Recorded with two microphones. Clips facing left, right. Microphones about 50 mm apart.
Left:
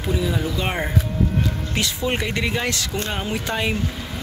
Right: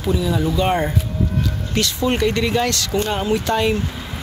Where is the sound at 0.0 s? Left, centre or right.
Centre.